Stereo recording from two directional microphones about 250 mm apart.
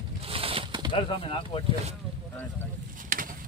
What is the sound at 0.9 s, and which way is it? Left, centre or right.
Speech, centre.